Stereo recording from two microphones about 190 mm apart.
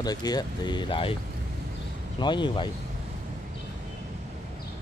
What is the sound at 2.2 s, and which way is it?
Speech, 25° left (ahead or behind).